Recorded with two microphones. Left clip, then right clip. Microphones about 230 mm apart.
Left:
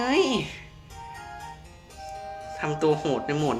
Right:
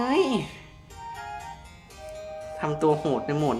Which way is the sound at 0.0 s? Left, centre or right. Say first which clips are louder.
Left 1 dB; centre.